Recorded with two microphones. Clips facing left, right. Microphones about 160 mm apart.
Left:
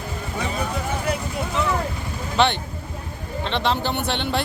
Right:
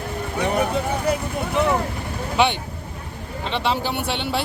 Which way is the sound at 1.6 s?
60° right (ahead or behind).